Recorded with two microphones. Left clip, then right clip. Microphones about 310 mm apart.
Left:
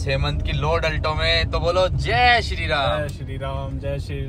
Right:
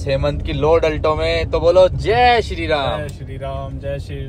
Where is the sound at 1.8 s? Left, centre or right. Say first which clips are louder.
Right 4 dB; centre.